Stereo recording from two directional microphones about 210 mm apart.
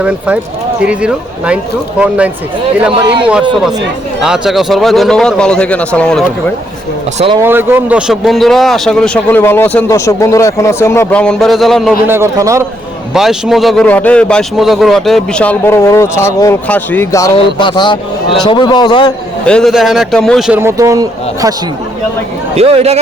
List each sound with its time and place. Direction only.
0.0 s a man's voice: 5° right (ahead or behind)
4.2 s a man's voice: centre (ahead or behind)
7.4 s a man's voice: 10° right (ahead or behind)
12.0 s a man's voice: 10° right (ahead or behind)
13.1 s a man's voice: centre (ahead or behind); by 19.1 s 20° left (ahead or behind)
19.5 s a man's voice: centre (ahead or behind)
20.6 s a man's voice: 15° right (ahead or behind)
22.5 s speech: 30° right (ahead or behind)